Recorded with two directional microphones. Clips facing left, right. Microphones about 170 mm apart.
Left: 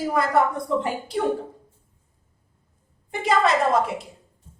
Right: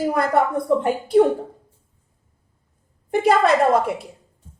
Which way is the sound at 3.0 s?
55° right (ahead or behind).